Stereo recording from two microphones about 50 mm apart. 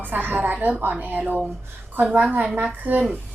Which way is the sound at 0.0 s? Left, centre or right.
Right.